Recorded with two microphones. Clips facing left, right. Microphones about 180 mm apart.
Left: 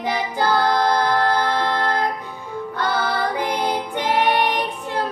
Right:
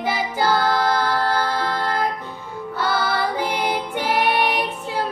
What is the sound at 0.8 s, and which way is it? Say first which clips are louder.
Music: left 2 dB; 5° right (ahead or behind).